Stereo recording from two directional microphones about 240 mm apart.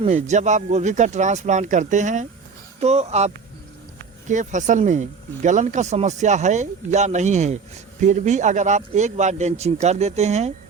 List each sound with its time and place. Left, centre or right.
0.0 s speech: right